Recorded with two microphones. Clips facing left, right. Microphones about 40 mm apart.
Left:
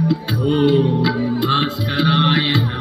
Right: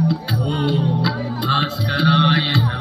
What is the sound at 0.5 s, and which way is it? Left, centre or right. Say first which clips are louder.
Music: left 6 dB; left.